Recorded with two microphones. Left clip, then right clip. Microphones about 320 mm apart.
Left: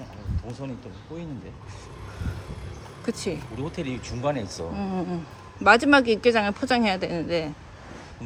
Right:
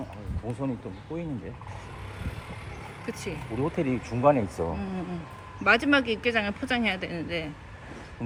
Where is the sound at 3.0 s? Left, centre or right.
Centre.